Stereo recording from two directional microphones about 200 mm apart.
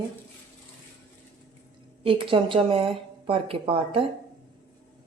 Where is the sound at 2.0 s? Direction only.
25° right (ahead or behind).